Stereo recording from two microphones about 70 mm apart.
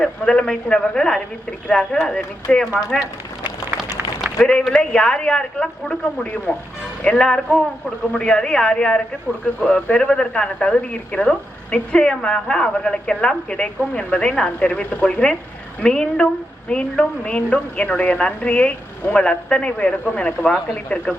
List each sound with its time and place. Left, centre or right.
0.0 s speech: centre
4.7 s speech: centre